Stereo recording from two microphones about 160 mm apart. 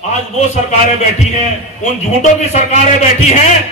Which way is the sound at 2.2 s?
45° left (ahead or behind).